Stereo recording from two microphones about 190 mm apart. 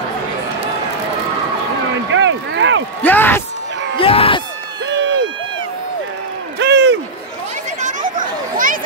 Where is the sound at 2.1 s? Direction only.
80° right.